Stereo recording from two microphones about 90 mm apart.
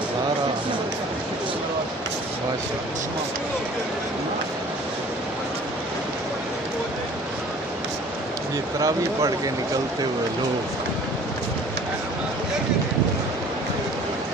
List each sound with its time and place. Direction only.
8.7 s speech: 40° right (ahead or behind)